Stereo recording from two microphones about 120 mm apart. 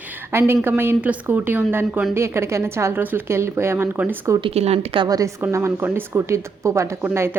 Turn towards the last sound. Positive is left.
turn(degrees=-20)  # may be behind; listen again after turning